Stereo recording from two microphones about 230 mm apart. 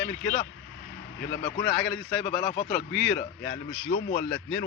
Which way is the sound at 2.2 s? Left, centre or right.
Left.